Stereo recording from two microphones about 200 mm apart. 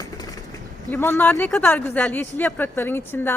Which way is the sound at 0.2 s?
20° left (ahead or behind).